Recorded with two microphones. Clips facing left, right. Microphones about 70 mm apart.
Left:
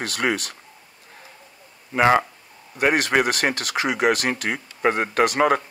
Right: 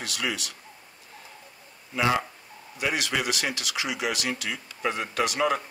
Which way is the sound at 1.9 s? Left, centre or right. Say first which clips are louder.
Left 7 dB; left.